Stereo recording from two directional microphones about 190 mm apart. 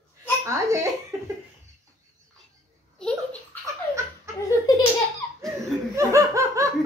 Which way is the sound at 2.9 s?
5° left (ahead or behind).